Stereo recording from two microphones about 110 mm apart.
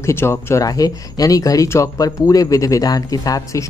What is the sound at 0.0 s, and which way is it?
Speech, 25° left (ahead or behind).